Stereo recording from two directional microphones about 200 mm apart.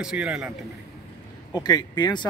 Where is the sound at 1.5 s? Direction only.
20° left (ahead or behind).